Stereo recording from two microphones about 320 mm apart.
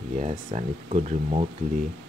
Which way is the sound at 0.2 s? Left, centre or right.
Right.